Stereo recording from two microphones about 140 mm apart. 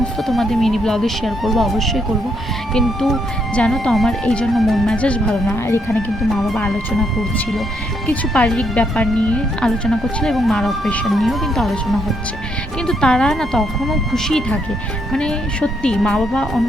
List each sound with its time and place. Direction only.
0.0 s speech: centre (ahead or behind)
5.6 s speech: 15° left (ahead or behind)
6.3 s speech: centre (ahead or behind)